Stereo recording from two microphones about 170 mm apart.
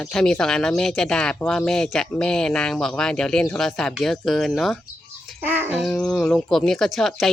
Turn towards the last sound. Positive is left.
turn(degrees=0)  # may be behind; listen again after turning